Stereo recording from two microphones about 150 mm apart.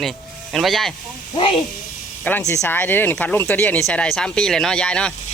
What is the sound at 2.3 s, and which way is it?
Speech, 15° left (ahead or behind).